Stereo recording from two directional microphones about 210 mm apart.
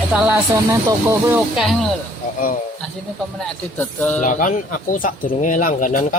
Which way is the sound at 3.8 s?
10° left (ahead or behind).